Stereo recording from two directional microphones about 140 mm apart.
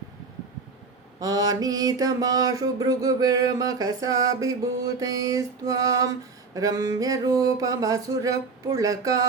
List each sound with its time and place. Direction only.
1.2 s mantra: 25° right (ahead or behind)